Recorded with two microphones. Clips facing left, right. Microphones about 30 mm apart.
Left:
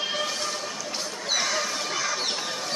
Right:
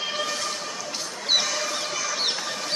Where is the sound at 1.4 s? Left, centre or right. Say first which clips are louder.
Even; left.